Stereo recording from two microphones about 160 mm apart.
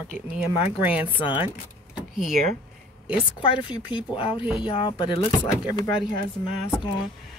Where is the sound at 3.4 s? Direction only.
30° left (ahead or behind).